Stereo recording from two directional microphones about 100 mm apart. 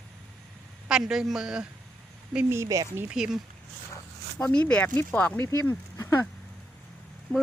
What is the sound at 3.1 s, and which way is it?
Speech, 5° right (ahead or behind).